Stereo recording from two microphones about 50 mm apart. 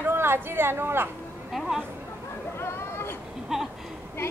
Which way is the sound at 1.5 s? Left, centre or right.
Centre.